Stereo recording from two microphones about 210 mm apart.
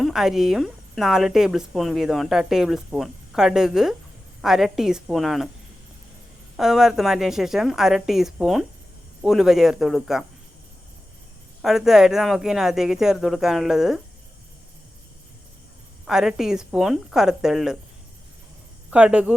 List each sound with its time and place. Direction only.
0.0 s a woman's voice: centre (ahead or behind)
6.6 s a woman's voice: centre (ahead or behind)
11.6 s a woman's voice: centre (ahead or behind)
16.0 s a woman's voice: centre (ahead or behind)
18.9 s speech: 5° right (ahead or behind)